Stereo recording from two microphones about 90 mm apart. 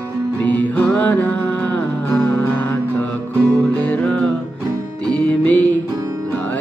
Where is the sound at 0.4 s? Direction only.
20° left (ahead or behind).